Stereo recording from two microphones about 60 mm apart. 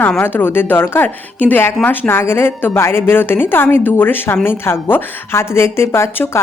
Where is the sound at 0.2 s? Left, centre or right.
Left.